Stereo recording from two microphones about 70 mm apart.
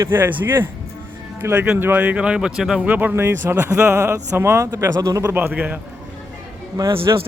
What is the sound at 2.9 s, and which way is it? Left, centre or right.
A man's voice, right.